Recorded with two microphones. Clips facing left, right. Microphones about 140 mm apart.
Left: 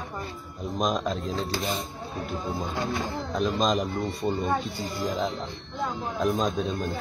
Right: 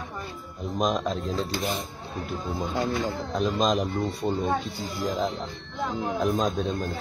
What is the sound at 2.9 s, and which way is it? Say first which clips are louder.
Speech: right 2 dB; 55° right (ahead or behind).